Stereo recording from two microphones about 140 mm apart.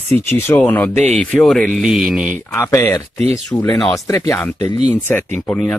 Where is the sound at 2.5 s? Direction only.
20° left (ahead or behind).